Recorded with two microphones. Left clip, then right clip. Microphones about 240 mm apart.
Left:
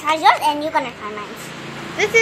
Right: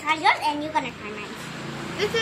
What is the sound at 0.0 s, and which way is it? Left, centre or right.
Speech, centre.